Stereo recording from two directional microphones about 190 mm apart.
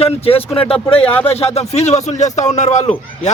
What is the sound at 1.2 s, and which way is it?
Speech, 30° left (ahead or behind).